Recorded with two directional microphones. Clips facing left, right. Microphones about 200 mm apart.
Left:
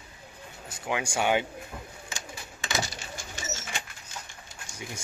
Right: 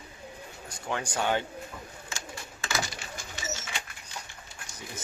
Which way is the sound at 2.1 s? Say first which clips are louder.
Right 2 dB; 15° left (ahead or behind).